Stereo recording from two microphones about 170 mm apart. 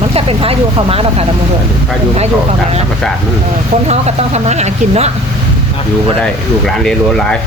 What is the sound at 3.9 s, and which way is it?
Speech, 40° right (ahead or behind).